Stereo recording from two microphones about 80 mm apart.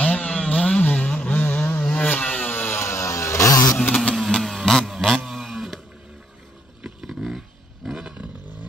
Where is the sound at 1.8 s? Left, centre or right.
Centre; by 3.8 s left.